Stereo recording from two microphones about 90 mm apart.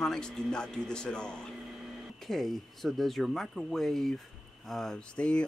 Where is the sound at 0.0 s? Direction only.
5° left (ahead or behind).